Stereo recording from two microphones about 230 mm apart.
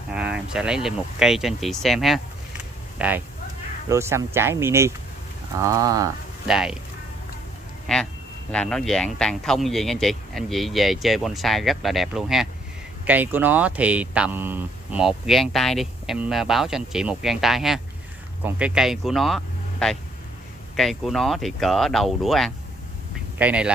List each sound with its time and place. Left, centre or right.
0.1 s speech: centre
6.4 s speech: centre
7.8 s speech: centre